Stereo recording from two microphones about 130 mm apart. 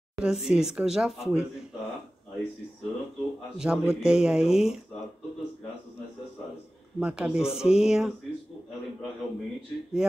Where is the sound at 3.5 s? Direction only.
5° right (ahead or behind).